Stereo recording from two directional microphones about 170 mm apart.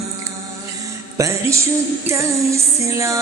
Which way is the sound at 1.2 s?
15° right (ahead or behind).